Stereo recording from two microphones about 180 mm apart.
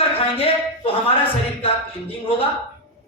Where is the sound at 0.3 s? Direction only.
30° left (ahead or behind).